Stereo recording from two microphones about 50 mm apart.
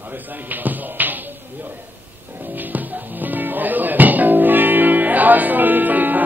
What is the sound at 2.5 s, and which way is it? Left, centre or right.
Music, right.